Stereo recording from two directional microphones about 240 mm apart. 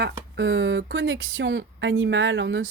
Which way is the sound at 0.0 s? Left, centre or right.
Right.